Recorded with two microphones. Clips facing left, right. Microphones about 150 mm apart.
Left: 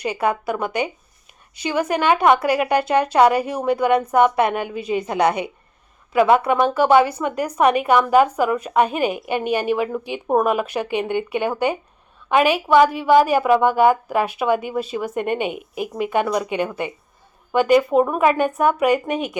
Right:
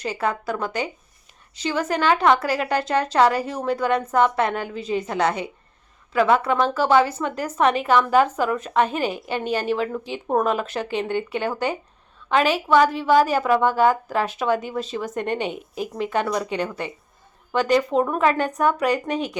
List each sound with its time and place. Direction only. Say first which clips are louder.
0.0 s a woman's voice: left 4 dB; 15° left (ahead or behind)